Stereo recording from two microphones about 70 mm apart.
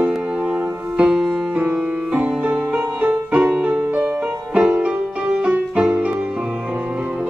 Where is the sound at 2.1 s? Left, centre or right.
Right.